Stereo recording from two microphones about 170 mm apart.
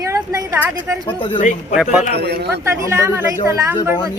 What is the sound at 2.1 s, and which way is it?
Speech, 75° right (ahead or behind).